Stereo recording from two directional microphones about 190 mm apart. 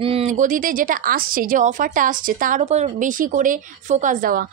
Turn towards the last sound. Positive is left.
turn(degrees=-45)  # may be behind; listen again after turning